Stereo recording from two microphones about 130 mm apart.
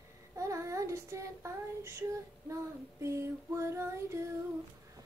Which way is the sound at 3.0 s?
20° right (ahead or behind).